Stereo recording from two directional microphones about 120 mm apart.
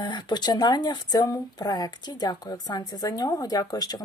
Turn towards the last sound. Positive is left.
turn(degrees=35)  # may be behind; listen again after turning